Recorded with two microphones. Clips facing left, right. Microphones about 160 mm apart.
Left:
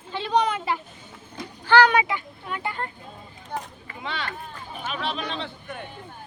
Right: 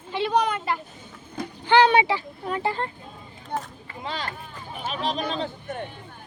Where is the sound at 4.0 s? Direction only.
40° right (ahead or behind).